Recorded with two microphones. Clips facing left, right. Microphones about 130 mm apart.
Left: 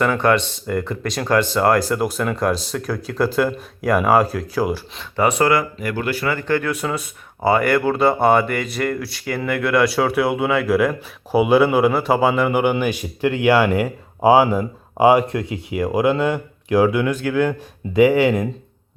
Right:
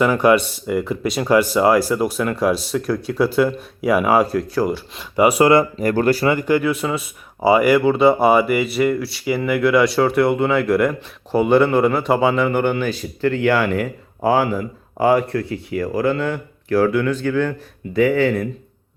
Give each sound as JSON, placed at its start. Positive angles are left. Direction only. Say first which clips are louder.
{"t": 0.0, "sound": "speech", "louder": "right 3 dB", "side_deg": -10}
{"t": 5.1, "sound": "speech", "louder": "right 3 dB", "side_deg": -10}
{"t": 5.8, "sound": "speech", "louder": "right 7 dB", "side_deg": -40}
{"t": 6.2, "sound": "speech", "louder": "right 4 dB", "side_deg": -15}